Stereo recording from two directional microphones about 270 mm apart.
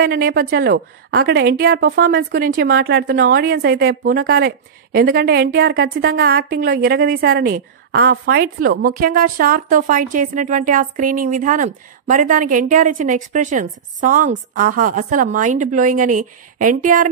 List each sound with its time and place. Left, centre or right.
0.0 s a woman's voice: right